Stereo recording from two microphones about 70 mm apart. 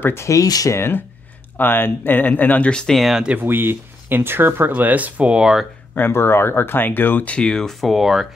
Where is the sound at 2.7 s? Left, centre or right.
Centre.